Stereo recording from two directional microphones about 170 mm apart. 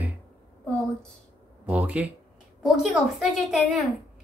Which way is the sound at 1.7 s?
10° right (ahead or behind).